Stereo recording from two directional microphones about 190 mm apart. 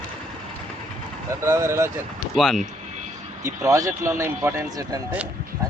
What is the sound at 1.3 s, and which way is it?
Vehicle, 15° right (ahead or behind).